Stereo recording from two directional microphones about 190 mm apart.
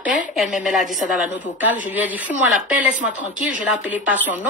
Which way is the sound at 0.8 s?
40° left (ahead or behind).